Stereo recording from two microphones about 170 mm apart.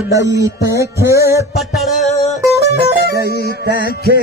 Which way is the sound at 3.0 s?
70° right (ahead or behind).